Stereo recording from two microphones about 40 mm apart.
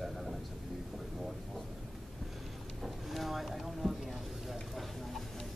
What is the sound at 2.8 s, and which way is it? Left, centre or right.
Boat, centre.